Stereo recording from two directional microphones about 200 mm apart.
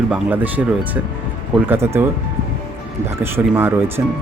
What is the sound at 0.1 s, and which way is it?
Speech, 10° right (ahead or behind).